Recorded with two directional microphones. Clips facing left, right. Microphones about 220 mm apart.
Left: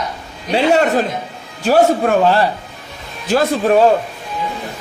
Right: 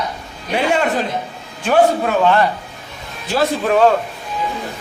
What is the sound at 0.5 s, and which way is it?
A man's voice, 40° left (ahead or behind).